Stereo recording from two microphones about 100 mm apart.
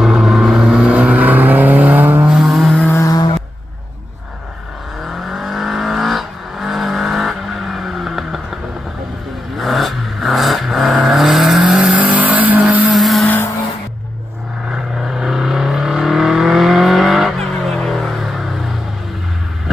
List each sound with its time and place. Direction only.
0.0 s vehicle: 5° right (ahead or behind)
2.2 s vehicle: centre (ahead or behind)
2.9 s vehicle: 35° left (ahead or behind)
5.3 s vehicle: centre (ahead or behind)
9.6 s vehicle: centre (ahead or behind)
12.8 s vehicle: centre (ahead or behind)
14.7 s vehicle: 5° right (ahead or behind)